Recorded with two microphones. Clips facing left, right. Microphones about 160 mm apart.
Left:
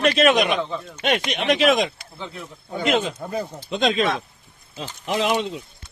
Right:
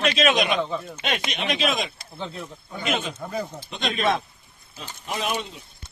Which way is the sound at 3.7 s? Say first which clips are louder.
Left 3 dB; 90° left.